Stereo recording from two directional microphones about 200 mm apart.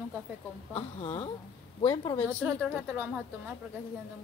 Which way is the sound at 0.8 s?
25° left (ahead or behind).